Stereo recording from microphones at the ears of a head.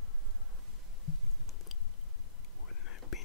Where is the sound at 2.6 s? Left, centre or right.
Left.